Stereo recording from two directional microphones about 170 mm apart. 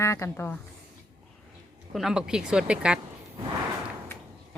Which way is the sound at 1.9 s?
5° right (ahead or behind).